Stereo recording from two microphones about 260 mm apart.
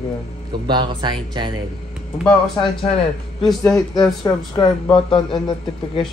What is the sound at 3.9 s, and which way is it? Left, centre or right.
Speech, centre.